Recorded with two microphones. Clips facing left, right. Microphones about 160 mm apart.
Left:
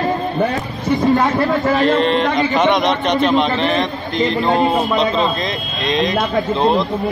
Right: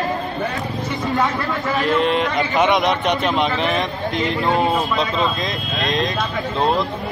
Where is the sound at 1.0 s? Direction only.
45° left (ahead or behind).